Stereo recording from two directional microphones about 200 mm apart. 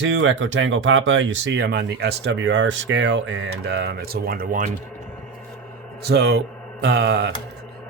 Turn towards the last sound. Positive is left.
turn(degrees=-55)  # may be behind; listen again after turning